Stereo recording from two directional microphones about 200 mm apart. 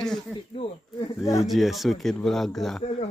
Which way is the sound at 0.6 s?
30° left (ahead or behind).